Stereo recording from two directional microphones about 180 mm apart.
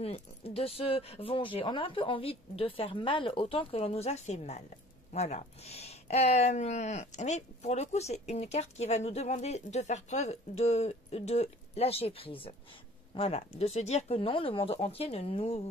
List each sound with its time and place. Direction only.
0.0 s speech: 35° left (ahead or behind)